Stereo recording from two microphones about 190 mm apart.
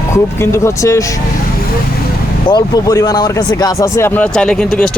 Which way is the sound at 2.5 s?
20° left (ahead or behind).